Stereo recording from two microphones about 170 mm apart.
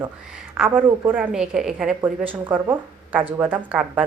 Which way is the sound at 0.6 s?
10° right (ahead or behind).